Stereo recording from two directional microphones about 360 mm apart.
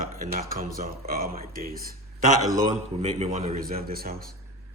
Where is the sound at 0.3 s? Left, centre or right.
Right.